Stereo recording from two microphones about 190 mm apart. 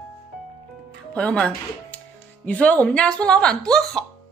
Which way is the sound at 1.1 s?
5° left (ahead or behind).